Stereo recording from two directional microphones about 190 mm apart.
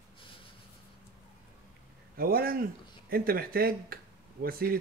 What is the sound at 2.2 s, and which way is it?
Speech, 50° right (ahead or behind).